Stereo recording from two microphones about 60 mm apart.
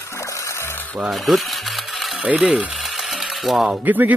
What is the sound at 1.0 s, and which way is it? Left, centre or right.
Mechanisms, centre.